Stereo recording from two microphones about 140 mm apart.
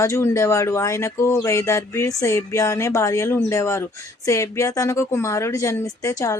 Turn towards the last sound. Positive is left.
turn(degrees=20)  # may be behind; listen again after turning